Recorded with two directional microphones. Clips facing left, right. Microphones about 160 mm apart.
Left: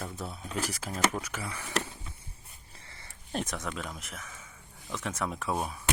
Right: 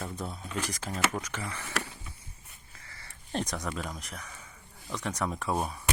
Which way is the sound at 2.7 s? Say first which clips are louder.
Even; 25° left (ahead or behind).